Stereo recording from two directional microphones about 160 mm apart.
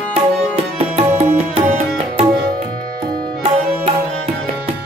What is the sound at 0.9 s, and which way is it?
Music, 35° right (ahead or behind).